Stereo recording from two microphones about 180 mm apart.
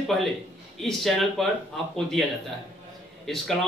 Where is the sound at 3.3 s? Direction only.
Centre (ahead or behind).